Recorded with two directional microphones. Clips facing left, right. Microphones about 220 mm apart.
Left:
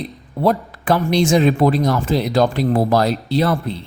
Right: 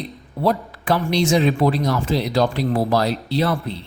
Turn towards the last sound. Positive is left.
turn(degrees=50)  # may be behind; listen again after turning